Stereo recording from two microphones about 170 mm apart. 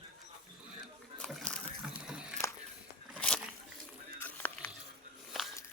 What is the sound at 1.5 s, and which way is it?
Water, 5° right (ahead or behind).